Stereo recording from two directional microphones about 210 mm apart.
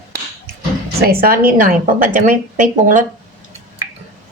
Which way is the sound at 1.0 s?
45° right (ahead or behind).